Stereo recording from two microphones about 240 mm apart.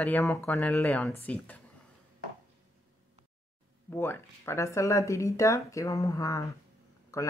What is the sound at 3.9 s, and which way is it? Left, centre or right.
Speech, centre.